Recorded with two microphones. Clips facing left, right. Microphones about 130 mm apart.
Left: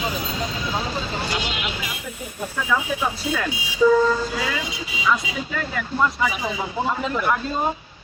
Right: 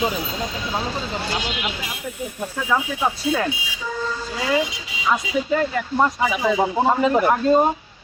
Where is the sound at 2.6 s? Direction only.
25° right (ahead or behind).